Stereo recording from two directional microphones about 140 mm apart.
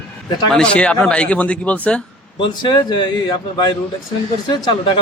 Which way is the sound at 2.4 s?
35° left (ahead or behind).